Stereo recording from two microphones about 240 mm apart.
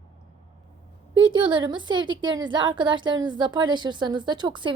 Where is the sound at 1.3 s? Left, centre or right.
Centre.